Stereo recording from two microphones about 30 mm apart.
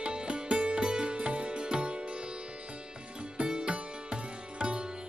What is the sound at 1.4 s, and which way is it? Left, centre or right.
Music, right.